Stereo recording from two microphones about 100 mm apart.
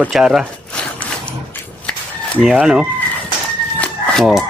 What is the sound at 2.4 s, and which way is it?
Speech, 5° right (ahead or behind).